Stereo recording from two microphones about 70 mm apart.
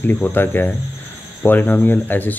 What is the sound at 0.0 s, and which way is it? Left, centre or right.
Speech, left.